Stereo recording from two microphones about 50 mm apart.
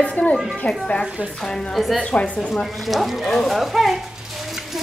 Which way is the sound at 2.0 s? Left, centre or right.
Left.